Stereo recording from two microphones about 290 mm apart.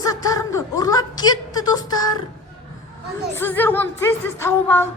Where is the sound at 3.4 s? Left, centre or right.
Centre.